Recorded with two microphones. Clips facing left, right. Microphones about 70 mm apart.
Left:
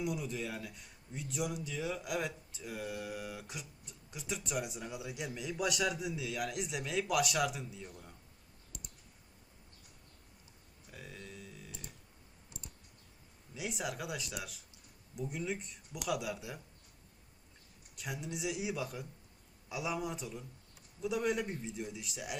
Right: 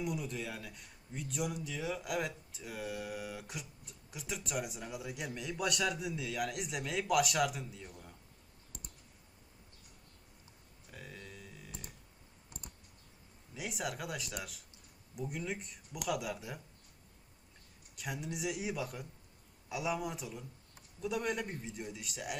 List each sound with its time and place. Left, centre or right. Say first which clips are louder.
0.0 s speech: left 1 dB; centre
8.7 s clicking: even; right
10.9 s a sound: left 1 dB; centre
13.5 s speech: even; centre
17.9 s speech: right 1 dB; centre